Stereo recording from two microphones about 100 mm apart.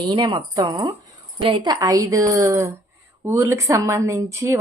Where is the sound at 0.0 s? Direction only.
50° right (ahead or behind).